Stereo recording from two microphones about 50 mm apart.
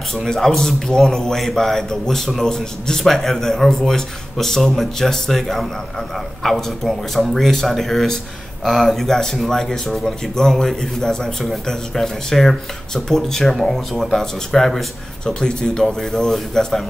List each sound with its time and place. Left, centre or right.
0.1 s a man's voice: centre
15.4 s a man's voice: centre